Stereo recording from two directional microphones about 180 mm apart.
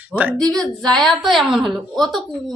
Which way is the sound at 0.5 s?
Centre (ahead or behind).